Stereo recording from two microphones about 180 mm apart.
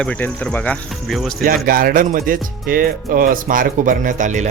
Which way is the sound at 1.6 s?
55° right (ahead or behind).